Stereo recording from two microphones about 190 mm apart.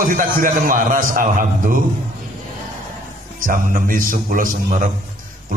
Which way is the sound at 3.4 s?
45° right (ahead or behind).